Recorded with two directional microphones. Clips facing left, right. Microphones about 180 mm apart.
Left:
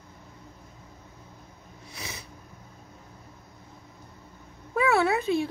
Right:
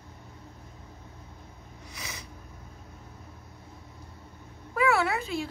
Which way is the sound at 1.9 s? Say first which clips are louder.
Left 2 dB; 30° left (ahead or behind).